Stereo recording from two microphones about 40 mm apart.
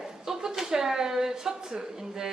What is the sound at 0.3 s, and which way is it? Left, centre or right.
A woman's voice, centre.